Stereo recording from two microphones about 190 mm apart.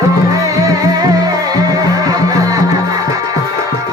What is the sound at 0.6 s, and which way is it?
Music, 20° right (ahead or behind).